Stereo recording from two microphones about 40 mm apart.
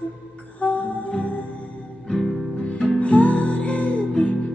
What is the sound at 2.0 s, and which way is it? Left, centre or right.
Music, centre.